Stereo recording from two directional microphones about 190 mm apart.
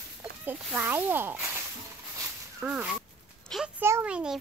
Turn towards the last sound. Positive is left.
turn(degrees=-5)  # may be behind; listen again after turning